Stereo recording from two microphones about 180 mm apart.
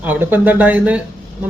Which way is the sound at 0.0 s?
10° right (ahead or behind).